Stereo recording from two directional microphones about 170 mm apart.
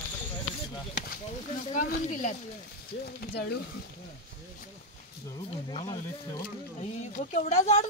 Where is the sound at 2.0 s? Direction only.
50° left (ahead or behind).